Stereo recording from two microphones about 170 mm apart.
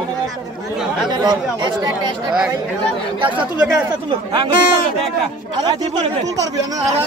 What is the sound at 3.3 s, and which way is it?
Speech, 10° right (ahead or behind).